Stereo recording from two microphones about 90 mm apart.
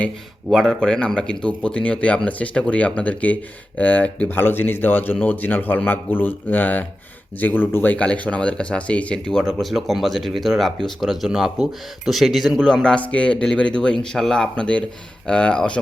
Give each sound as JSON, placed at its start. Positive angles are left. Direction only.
{"t": 0.5, "sound": "speech", "side_deg": 0}